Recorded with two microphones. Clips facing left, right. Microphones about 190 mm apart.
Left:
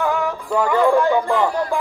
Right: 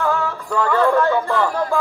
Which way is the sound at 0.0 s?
15° left (ahead or behind).